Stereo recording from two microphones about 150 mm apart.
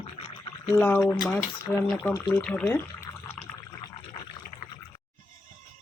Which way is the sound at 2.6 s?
15° left (ahead or behind).